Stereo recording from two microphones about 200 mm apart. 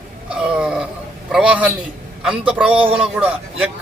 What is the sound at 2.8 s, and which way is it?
Speech, 30° right (ahead or behind).